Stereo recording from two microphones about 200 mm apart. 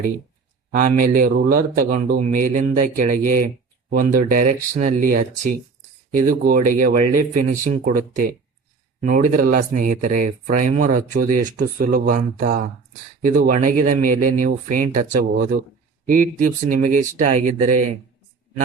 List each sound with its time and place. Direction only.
0.7 s a man's voice: 45° right (ahead or behind)